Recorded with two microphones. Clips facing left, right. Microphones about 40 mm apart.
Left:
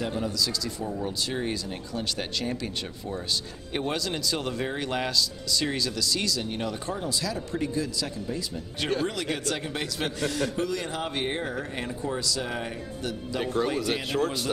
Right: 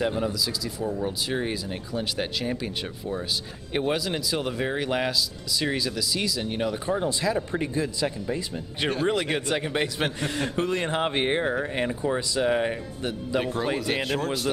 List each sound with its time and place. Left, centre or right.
0.0 s speech: centre
7.0 s a man's voice: right
13.4 s speech: centre